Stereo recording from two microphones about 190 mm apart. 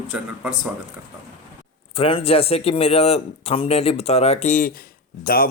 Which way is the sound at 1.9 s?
30° left (ahead or behind).